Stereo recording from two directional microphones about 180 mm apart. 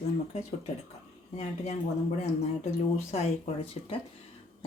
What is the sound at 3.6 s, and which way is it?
Speech, 30° left (ahead or behind).